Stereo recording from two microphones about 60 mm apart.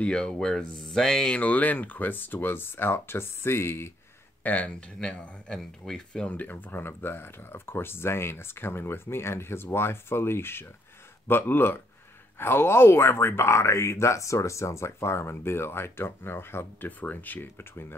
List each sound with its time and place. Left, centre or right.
0.0 s speech: centre
1.3 s speech: left
4.4 s speech: left
5.5 s speech: centre
6.2 s speech: left